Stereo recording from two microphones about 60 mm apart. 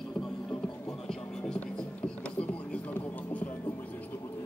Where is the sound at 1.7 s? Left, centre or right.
Centre.